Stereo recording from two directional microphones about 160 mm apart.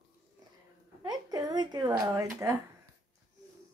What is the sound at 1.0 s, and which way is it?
A woman's voice, 25° right (ahead or behind).